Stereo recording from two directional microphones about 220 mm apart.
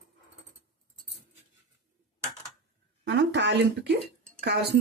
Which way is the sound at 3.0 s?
55° right (ahead or behind).